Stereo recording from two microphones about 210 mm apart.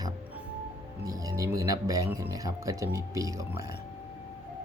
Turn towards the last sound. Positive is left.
turn(degrees=-15)  # may be behind; listen again after turning